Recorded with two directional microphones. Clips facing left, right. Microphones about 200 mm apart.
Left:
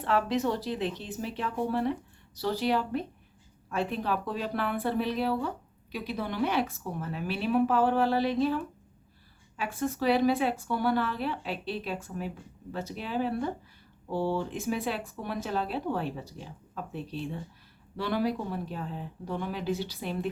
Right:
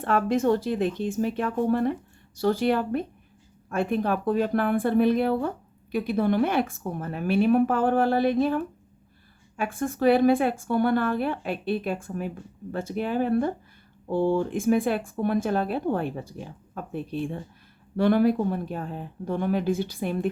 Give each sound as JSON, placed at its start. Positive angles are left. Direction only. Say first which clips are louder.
{"t": 0.0, "sound": "speech", "louder": "right 4 dB", "side_deg": -50}